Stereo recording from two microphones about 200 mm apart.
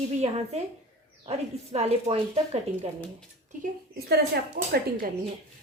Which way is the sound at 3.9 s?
50° right (ahead or behind).